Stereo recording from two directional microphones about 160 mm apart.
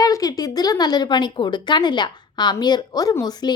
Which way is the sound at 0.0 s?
25° left (ahead or behind).